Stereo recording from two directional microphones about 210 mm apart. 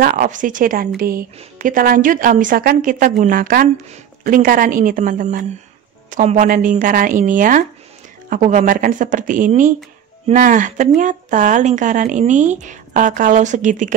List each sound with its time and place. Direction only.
0.0 s a woman's voice: 40° right (ahead or behind)